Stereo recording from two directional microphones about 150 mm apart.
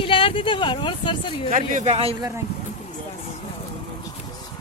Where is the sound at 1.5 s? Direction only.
50° right (ahead or behind).